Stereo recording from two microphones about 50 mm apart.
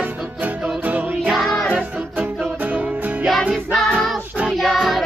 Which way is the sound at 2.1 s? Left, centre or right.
Right.